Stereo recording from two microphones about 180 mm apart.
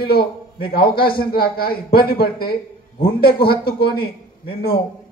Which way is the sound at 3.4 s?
60° left (ahead or behind).